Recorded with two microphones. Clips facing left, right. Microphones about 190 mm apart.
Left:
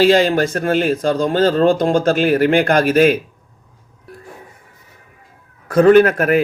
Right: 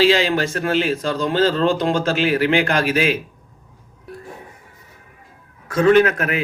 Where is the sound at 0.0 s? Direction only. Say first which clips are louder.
Left 4 dB; 50° left (ahead or behind).